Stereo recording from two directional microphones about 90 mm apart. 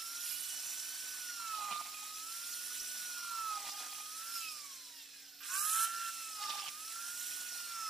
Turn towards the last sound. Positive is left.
turn(degrees=0)  # may be behind; listen again after turning